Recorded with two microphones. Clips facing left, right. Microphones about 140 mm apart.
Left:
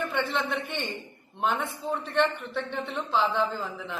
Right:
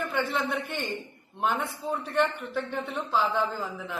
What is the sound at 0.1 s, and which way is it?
A man's voice, 5° right (ahead or behind).